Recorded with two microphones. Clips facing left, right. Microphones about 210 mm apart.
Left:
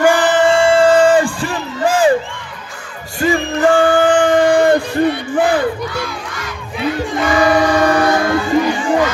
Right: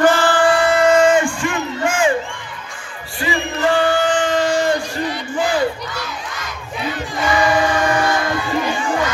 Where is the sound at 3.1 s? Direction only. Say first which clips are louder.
Left 6 dB; 45° left (ahead or behind).